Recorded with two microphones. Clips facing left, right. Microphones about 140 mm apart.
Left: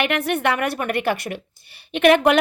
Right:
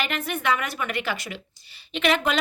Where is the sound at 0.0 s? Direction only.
65° left (ahead or behind).